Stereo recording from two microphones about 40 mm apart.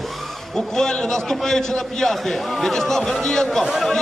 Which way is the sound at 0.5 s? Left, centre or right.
Centre.